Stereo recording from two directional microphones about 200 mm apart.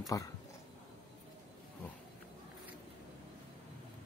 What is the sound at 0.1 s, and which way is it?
Speech, 20° left (ahead or behind).